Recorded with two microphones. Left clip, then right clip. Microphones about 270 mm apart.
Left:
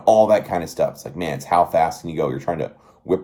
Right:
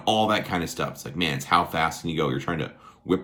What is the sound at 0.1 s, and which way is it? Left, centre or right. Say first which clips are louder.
Speech: left 8 dB; right.